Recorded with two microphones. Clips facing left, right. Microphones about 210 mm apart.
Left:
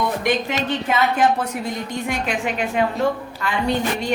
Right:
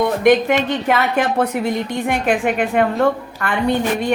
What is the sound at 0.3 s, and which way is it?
A woman's voice, 60° right (ahead or behind).